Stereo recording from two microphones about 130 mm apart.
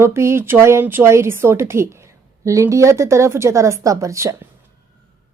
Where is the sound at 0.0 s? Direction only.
20° right (ahead or behind).